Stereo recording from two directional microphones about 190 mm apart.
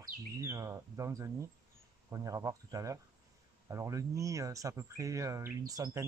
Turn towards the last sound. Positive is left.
turn(degrees=-20)  # may be behind; listen again after turning